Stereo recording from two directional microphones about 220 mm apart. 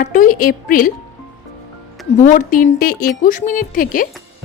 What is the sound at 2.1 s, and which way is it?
Speech, 35° left (ahead or behind).